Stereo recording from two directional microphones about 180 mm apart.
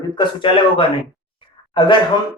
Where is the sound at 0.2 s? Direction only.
25° left (ahead or behind).